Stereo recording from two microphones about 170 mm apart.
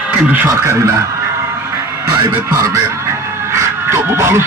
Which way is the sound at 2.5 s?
20° right (ahead or behind).